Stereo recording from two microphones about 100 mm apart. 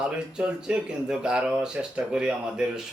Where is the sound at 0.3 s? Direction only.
10° right (ahead or behind).